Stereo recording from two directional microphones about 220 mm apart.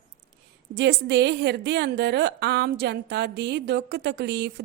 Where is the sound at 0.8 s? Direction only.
50° right (ahead or behind).